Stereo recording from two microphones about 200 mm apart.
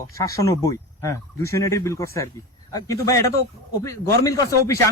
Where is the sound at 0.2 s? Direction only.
15° left (ahead or behind).